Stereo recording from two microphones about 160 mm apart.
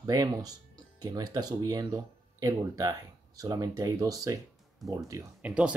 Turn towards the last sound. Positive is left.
turn(degrees=-5)  # may be behind; listen again after turning